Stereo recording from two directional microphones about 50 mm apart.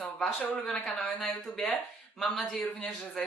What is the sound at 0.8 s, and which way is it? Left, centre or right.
Speech, centre.